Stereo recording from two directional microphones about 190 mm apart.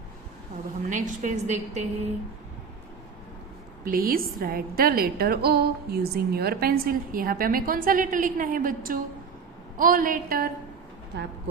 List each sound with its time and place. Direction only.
0.9 s a woman's voice: 40° right (ahead or behind)
3.8 s a woman's voice: 50° right (ahead or behind)
11.1 s speech: 60° right (ahead or behind)